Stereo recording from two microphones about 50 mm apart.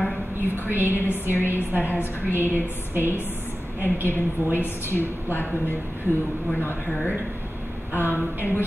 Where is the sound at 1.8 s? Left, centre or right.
Left.